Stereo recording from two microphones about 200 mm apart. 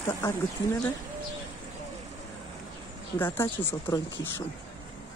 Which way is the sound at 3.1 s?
10° left (ahead or behind).